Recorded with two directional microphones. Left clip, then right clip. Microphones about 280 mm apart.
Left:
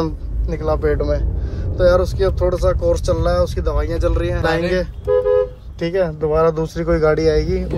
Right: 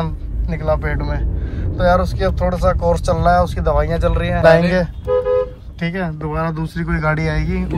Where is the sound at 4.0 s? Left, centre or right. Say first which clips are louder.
Right 1 dB; centre.